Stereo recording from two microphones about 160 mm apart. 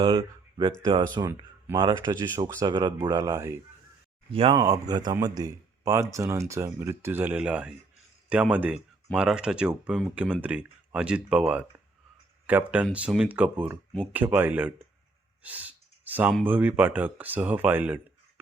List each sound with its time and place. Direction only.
0.0 s speech: 30° right (ahead or behind)
4.3 s speech: 35° right (ahead or behind)
4.5 s speech: 20° right (ahead or behind)
15.4 s clicking: 10° right (ahead or behind)
16.5 s speech: 10° right (ahead or behind)